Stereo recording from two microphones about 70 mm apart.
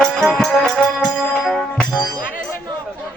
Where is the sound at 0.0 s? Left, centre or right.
Centre.